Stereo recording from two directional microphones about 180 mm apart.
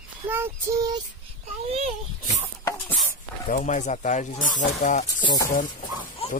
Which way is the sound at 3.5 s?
45° left (ahead or behind).